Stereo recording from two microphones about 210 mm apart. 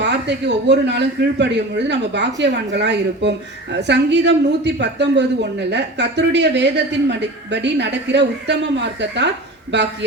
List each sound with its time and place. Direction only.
0.0 s speech: 55° right (ahead or behind)